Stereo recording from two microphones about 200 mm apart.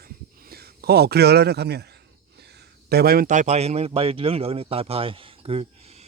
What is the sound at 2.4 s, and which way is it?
A man's voice, 55° right (ahead or behind).